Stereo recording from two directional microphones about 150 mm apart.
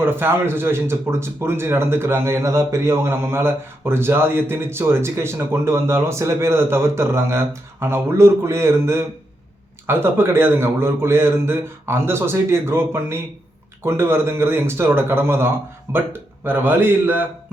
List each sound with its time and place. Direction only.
0.0 s speech: 15° right (ahead or behind)